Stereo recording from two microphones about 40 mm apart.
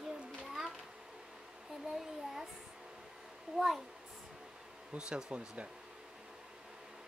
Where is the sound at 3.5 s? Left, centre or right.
Centre.